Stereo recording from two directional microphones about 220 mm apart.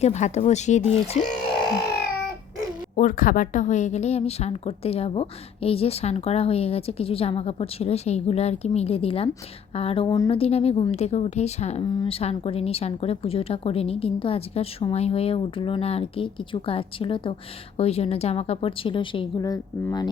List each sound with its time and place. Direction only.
0.0 s a woman's voice: 30° left (ahead or behind)
2.9 s a woman's voice: 35° left (ahead or behind); by 20.1 s 15° left (ahead or behind)